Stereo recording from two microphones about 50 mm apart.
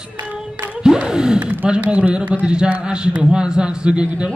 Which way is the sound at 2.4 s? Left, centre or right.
Centre.